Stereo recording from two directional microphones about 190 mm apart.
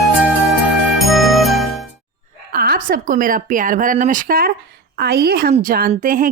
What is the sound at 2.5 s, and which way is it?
A woman's voice, 50° right (ahead or behind).